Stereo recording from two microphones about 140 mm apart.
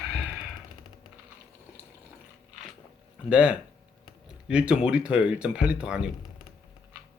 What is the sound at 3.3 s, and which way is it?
Speech, 5° right (ahead or behind).